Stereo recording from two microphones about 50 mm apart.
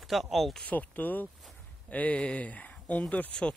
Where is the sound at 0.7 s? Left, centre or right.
Left.